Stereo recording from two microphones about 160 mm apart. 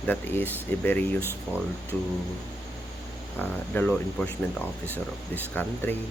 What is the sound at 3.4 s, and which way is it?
Speech, 10° left (ahead or behind).